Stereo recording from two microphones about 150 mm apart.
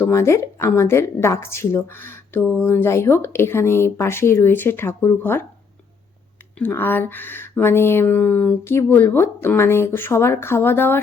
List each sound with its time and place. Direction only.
0.0 s a woman's voice: 15° left (ahead or behind)
6.6 s a woman's voice: 15° left (ahead or behind)